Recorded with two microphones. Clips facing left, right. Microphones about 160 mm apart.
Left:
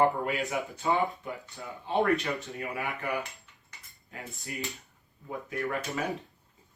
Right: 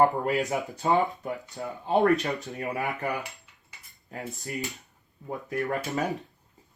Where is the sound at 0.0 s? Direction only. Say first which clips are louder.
Right 3 dB; 40° right (ahead or behind).